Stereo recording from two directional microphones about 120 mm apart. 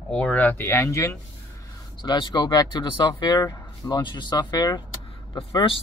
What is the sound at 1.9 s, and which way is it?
Speech, 40° left (ahead or behind).